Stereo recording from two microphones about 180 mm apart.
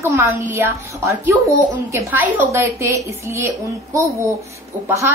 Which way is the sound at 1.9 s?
10° right (ahead or behind).